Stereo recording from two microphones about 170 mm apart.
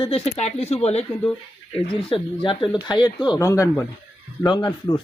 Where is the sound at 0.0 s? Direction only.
35° left (ahead or behind).